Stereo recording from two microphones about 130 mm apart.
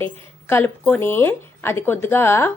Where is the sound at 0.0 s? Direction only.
20° left (ahead or behind).